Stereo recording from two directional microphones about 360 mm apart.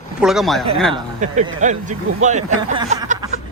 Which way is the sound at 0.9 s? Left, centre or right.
Centre.